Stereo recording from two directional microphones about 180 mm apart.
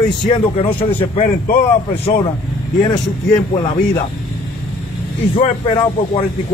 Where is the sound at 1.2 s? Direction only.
50° left (ahead or behind).